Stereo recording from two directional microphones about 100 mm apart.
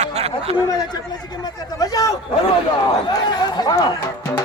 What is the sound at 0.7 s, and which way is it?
Speech, 40° left (ahead or behind).